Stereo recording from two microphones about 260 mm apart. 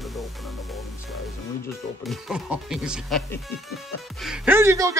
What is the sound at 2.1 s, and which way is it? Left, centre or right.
Speech, centre.